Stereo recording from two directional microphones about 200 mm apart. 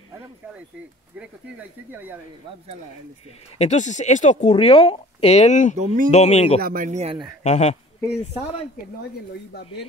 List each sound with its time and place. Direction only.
1.1 s speech: 5° right (ahead or behind)
3.5 s speech: 35° left (ahead or behind)
6.6 s speech: 45° right (ahead or behind)
7.4 s speech: 35° left (ahead or behind)